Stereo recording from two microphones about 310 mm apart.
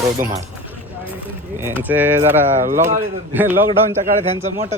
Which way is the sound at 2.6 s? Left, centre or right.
Right.